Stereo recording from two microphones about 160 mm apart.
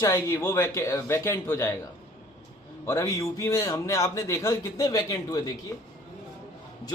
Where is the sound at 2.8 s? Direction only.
20° left (ahead or behind).